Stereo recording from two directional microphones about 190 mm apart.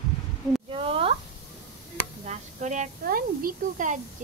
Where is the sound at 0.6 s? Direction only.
30° right (ahead or behind).